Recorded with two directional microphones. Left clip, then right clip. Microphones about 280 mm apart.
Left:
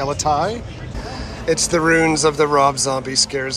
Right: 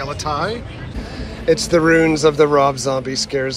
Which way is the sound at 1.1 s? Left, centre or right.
Centre.